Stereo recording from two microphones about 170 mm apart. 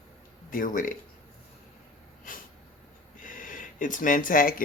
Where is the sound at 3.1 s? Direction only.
50° left (ahead or behind).